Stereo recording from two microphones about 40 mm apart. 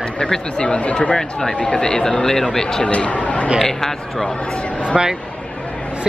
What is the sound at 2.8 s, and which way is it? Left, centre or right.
Speech, left.